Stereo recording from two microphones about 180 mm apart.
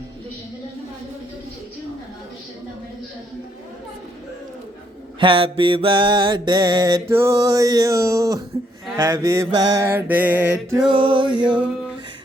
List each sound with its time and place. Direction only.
5.2 s mantra: 30° right (ahead or behind); by 10.8 s 10° right (ahead or behind)
10.8 s mantra: 25° right (ahead or behind)